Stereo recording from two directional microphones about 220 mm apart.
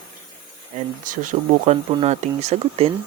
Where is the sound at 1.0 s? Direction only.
35° right (ahead or behind).